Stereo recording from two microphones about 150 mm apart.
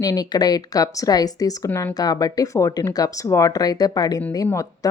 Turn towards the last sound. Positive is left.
turn(degrees=20)  # may be behind; listen again after turning